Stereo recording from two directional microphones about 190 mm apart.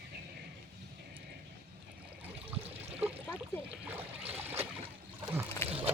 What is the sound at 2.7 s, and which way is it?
Water, 30° right (ahead or behind).